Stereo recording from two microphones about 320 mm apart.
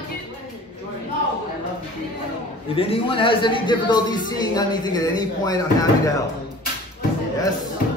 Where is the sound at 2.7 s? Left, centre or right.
Centre.